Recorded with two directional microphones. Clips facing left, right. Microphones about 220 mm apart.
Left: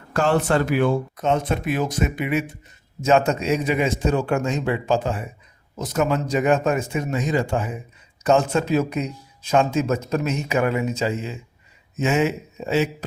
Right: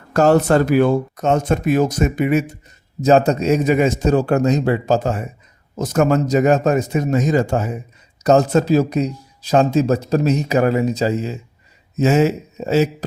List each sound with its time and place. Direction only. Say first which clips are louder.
0.1 s speech: right 6 dB; 40° right (ahead or behind)